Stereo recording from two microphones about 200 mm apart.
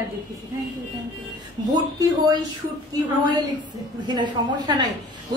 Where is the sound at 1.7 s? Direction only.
20° right (ahead or behind).